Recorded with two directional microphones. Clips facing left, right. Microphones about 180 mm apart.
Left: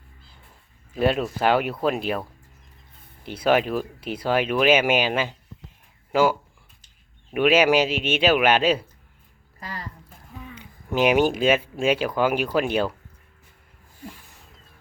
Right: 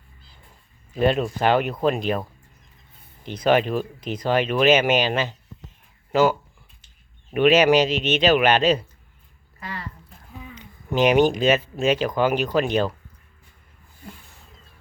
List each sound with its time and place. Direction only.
0.9 s speech: 5° left (ahead or behind)
3.2 s speech: 5° left (ahead or behind)
7.3 s speech: 10° left (ahead or behind)
9.6 s a sound: 35° left (ahead or behind)
10.5 s speech: 10° left (ahead or behind)